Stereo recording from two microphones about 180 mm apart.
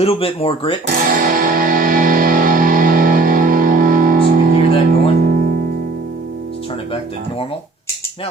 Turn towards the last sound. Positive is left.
turn(degrees=30)  # may be behind; listen again after turning